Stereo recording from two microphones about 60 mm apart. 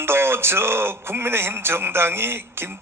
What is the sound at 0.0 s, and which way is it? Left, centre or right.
A man's voice, right.